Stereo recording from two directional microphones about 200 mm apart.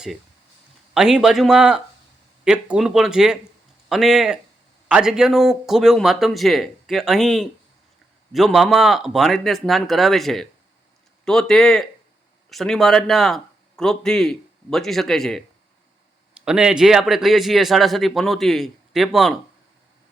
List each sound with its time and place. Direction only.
0.9 s a man's voice: 5° right (ahead or behind)